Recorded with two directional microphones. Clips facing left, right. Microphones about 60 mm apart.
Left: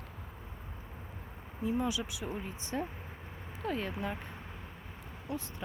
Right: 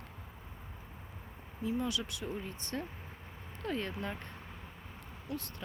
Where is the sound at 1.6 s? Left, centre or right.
Centre.